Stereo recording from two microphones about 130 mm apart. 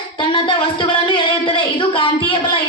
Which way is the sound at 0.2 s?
40° left (ahead or behind).